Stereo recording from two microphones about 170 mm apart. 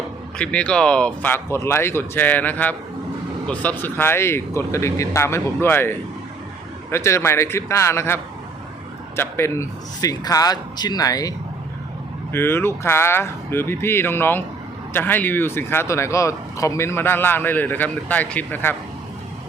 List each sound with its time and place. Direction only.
0.3 s speech: 5° left (ahead or behind)
6.9 s a man's voice: 15° left (ahead or behind)